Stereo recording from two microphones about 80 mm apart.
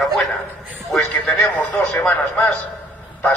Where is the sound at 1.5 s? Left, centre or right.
Left.